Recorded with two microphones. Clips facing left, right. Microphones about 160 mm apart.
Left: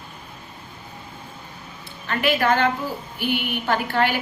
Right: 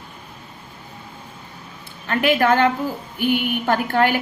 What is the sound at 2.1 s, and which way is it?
A woman's voice, 50° right (ahead or behind).